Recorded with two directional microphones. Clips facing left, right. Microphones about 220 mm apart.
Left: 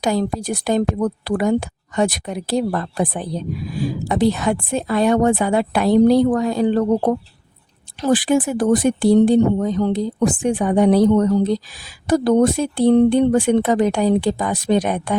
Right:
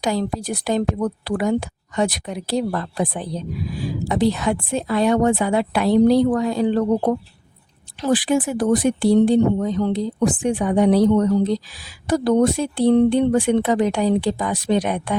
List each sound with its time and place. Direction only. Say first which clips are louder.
0.0 s speech: left 2 dB; 45° left (ahead or behind)